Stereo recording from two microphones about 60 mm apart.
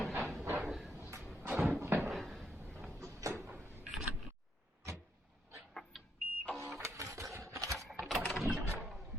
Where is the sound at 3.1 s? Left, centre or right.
Right.